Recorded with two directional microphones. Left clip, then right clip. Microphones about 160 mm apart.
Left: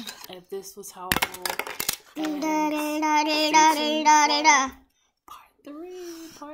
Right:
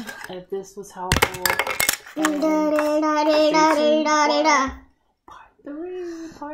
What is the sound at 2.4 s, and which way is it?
Child singing, 50° left (ahead or behind).